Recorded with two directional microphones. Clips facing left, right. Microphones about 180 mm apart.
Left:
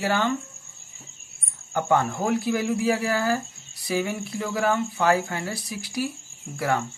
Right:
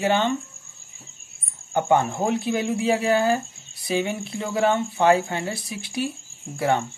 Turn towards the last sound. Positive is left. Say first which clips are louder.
# right 3 dB
turn(degrees=-25)  # may be behind; listen again after turning